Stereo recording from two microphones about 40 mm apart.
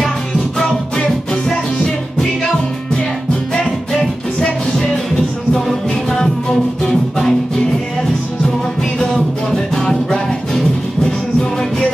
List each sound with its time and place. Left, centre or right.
0.7 s music: left
3.9 s music: centre
9.8 s music: left